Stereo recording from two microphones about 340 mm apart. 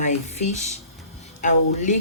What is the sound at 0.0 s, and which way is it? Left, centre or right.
Speech, centre.